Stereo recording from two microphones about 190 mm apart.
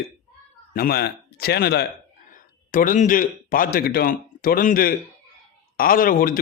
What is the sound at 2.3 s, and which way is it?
A man's voice, 45° left (ahead or behind).